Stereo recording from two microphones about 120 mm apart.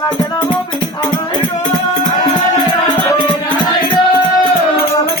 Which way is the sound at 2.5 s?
40° left (ahead or behind).